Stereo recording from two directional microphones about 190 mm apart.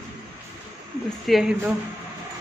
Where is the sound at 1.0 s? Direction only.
Centre (ahead or behind).